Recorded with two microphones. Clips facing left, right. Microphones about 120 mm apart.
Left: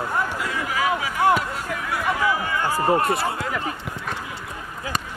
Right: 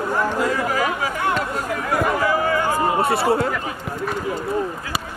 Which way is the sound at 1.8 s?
45° right (ahead or behind).